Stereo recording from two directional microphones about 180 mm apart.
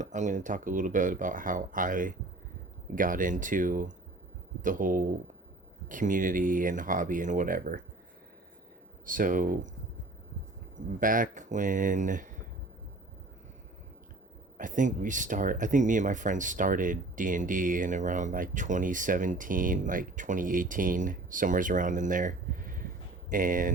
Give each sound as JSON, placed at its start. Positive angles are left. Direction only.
{"t": 0.0, "sound": "speech", "side_deg": -40}
{"t": 9.0, "sound": "speech", "side_deg": -50}
{"t": 11.0, "sound": "speech", "side_deg": -50}
{"t": 14.6, "sound": "speech", "side_deg": -45}